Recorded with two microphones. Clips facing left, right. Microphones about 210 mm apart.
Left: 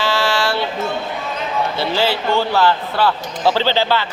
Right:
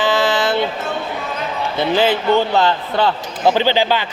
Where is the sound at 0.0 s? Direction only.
20° right (ahead or behind).